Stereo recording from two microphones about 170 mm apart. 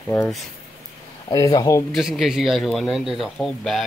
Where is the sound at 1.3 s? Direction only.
20° left (ahead or behind).